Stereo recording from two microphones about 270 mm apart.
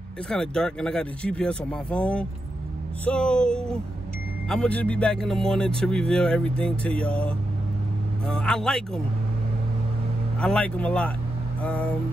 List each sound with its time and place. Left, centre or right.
0.3 s speech: centre
10.4 s speech: centre